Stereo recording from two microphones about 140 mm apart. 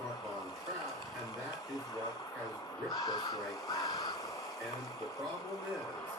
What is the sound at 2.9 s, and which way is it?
Speech, 30° left (ahead or behind).